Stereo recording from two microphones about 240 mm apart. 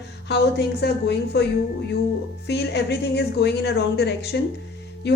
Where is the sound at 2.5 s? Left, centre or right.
Left.